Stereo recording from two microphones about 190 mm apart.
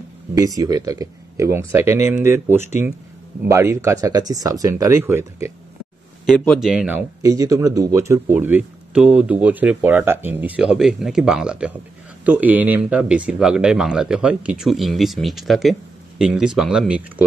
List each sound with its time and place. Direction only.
0.3 s speech: 20° right (ahead or behind)
6.2 s speech: 5° left (ahead or behind)